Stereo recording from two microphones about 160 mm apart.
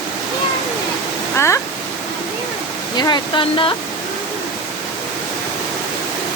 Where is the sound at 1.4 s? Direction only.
15° left (ahead or behind).